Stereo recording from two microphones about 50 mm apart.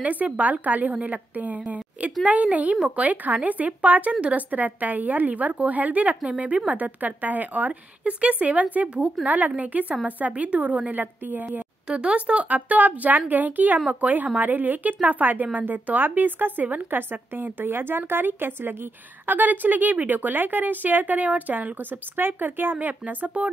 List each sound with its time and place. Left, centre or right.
0.0 s a woman's voice: right
11.9 s a woman's voice: right